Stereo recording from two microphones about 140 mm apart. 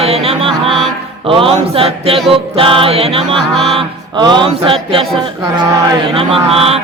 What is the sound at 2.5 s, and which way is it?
Music, 40° right (ahead or behind).